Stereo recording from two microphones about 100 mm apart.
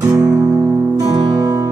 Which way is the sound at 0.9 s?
35° right (ahead or behind).